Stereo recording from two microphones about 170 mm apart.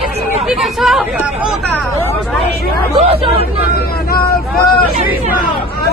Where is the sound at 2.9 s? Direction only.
35° right (ahead or behind).